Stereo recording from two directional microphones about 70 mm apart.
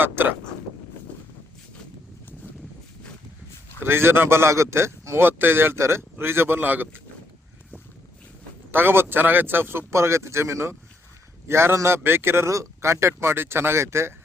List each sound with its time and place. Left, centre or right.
0.0 s vehicle: right
3.8 s speech: right
8.7 s speech: right